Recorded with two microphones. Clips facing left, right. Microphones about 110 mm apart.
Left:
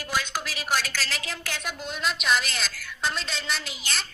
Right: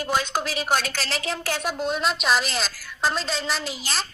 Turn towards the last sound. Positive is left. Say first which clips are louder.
# right 5 dB
turn(degrees=-35)  # may be behind; listen again after turning